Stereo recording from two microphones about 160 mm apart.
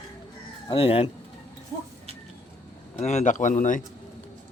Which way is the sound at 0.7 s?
35° left (ahead or behind).